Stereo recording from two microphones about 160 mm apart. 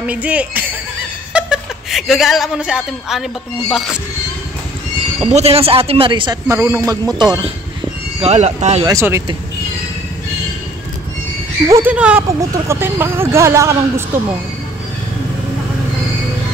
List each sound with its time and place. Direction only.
0.0 s a man's voice: 10° right (ahead or behind)
5.3 s a man's voice: 40° right (ahead or behind)
6.5 s speech: 20° right (ahead or behind)
8.2 s speech: 40° right (ahead or behind)
8.8 s speech: 20° right (ahead or behind)
11.6 s speech: 15° right (ahead or behind)